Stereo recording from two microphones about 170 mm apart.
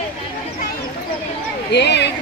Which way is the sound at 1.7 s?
85° left.